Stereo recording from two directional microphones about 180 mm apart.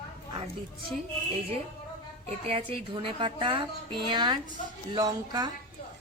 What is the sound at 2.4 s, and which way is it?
Speech, 30° right (ahead or behind).